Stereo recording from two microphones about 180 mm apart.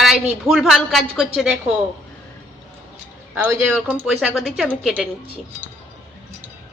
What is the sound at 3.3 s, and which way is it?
A woman's voice, 10° right (ahead or behind).